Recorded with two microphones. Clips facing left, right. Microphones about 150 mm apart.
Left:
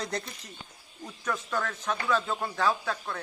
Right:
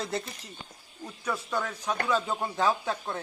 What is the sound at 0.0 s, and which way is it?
Speech, 5° right (ahead or behind).